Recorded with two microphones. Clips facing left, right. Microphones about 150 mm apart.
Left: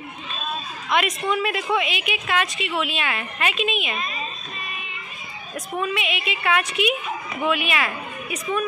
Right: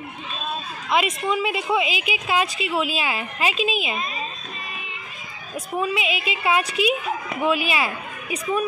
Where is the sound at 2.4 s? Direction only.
35° right (ahead or behind).